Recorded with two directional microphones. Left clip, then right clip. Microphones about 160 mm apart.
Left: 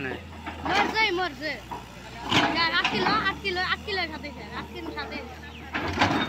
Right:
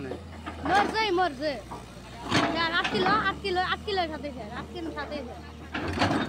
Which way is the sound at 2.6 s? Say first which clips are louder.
Left 2 dB; 90° right.